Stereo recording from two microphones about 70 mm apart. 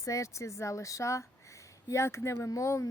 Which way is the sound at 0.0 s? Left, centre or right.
Left.